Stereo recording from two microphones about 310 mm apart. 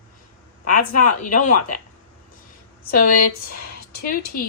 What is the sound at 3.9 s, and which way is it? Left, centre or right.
Speech, left.